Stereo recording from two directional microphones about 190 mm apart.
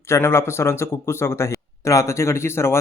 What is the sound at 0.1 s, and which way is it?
A man's voice, 15° left (ahead or behind).